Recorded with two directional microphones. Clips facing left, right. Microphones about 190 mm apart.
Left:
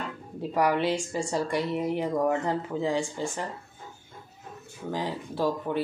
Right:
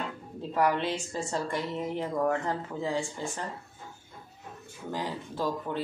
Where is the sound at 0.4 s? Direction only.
15° left (ahead or behind).